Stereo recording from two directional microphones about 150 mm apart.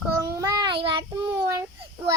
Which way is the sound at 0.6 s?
35° right (ahead or behind).